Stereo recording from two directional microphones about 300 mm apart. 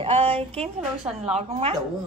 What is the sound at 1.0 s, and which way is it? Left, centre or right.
Speech, centre.